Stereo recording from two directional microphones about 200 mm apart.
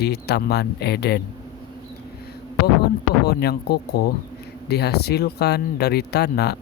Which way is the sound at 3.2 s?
55° left (ahead or behind).